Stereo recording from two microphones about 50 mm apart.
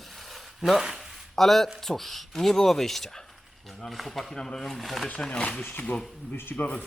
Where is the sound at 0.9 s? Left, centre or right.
Centre.